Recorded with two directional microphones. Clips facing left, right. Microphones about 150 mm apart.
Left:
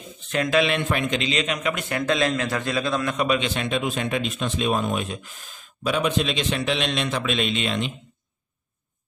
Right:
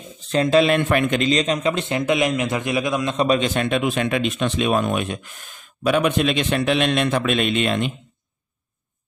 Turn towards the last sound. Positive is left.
turn(degrees=-55)  # may be behind; listen again after turning